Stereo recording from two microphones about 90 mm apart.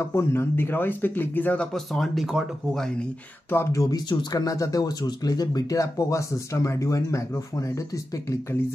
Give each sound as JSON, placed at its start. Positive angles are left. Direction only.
{"t": 0.0, "sound": "speech", "side_deg": 30}
{"t": 1.7, "sound": "speech", "side_deg": 0}
{"t": 3.4, "sound": "speech", "side_deg": 25}
{"t": 3.8, "sound": "speech", "side_deg": 50}